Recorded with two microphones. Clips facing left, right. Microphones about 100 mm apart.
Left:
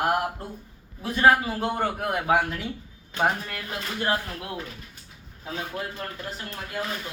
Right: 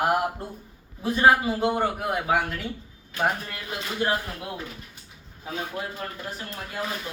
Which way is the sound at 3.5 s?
10° right (ahead or behind).